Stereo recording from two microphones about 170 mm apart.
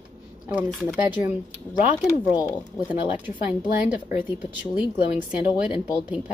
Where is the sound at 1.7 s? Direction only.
20° left (ahead or behind).